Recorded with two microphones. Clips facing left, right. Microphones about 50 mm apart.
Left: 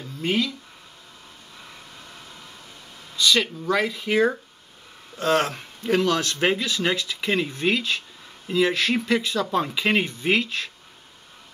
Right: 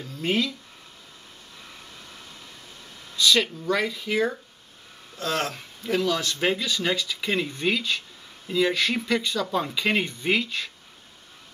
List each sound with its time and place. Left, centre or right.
0.2 s speech: centre
3.2 s speech: centre
4.1 s speech: left
5.1 s speech: left
6.3 s speech: centre